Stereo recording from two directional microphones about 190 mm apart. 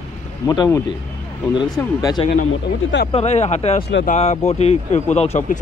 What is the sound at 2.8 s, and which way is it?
Speech, 90° left.